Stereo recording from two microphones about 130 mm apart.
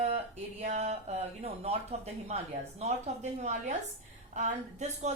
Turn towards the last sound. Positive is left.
turn(degrees=-60)  # may be behind; listen again after turning